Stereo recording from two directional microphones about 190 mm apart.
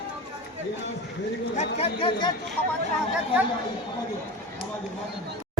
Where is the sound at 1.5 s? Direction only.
30° left (ahead or behind).